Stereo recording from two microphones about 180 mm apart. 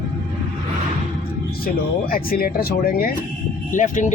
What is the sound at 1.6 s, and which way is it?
Speech, 55° left (ahead or behind).